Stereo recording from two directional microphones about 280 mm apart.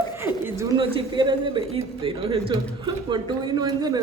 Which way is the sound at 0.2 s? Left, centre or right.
Centre.